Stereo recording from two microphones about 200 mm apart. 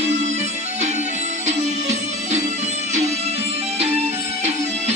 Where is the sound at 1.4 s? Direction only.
35° right (ahead or behind).